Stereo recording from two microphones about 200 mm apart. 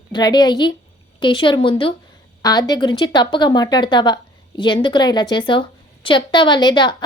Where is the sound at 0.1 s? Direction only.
20° left (ahead or behind).